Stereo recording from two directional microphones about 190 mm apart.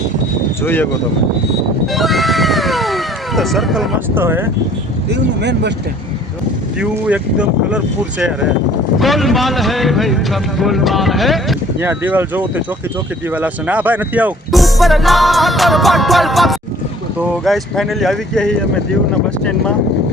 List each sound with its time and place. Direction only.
0.6 s speech: 10° left (ahead or behind)
1.9 s a sound: centre (ahead or behind)
4.1 s speech: 10° right (ahead or behind)
5.0 s speech: 65° right (ahead or behind)
6.7 s speech: 5° right (ahead or behind)
9.0 s speech: centre (ahead or behind)
11.8 s speech: 10° right (ahead or behind)